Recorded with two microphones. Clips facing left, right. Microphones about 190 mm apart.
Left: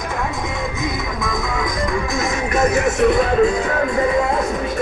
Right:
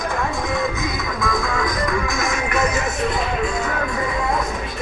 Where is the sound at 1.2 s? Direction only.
20° left (ahead or behind); by 2.7 s 40° left (ahead or behind).